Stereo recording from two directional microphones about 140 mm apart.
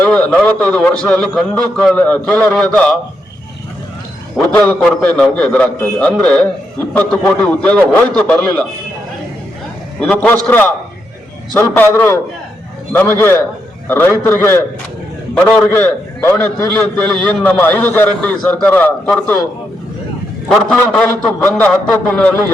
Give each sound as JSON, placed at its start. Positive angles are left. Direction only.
{"t": 0.0, "sound": "a man's voice", "side_deg": 10}
{"t": 4.4, "sound": "a man's voice", "side_deg": 10}
{"t": 10.0, "sound": "a man's voice", "side_deg": 10}
{"t": 20.5, "sound": "a man's voice", "side_deg": 5}